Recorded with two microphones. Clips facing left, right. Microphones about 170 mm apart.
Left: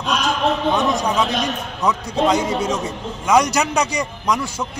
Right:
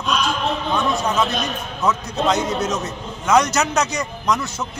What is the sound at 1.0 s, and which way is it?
A man's voice, 15° left (ahead or behind).